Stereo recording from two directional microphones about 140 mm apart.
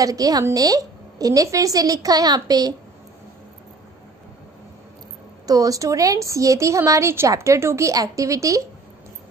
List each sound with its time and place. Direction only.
0.0 s speech: 25° right (ahead or behind)
5.5 s speech: 25° right (ahead or behind)